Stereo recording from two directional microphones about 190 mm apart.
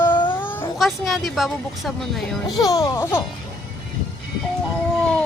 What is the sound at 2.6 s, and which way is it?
Speech, 20° left (ahead or behind).